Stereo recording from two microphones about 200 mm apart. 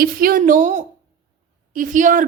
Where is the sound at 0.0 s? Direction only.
45° right (ahead or behind).